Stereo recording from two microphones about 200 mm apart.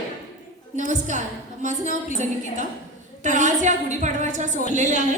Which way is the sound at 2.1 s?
35° right (ahead or behind).